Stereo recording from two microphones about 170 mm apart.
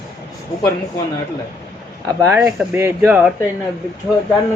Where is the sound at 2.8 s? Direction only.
15° right (ahead or behind).